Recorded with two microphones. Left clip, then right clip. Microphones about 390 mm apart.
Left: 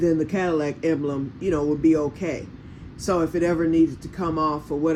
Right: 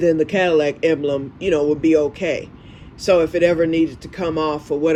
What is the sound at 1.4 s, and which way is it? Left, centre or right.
Speech, right.